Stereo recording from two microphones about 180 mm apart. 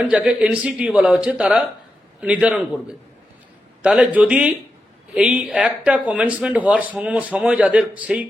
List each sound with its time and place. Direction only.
0.0 s a man's voice: 5° right (ahead or behind)